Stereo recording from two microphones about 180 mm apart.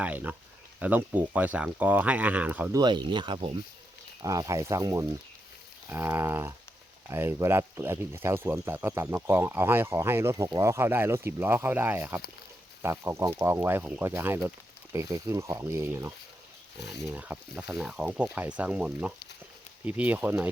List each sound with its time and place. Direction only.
0.0 s speech: 10° right (ahead or behind)
2.7 s speech: 25° right (ahead or behind)
4.2 s speech: 20° right (ahead or behind)
17.2 s speech: 5° right (ahead or behind)